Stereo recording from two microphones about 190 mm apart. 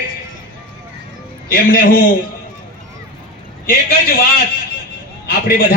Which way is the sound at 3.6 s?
50° left (ahead or behind).